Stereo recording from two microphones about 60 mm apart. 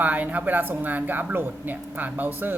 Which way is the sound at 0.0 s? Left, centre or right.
Right.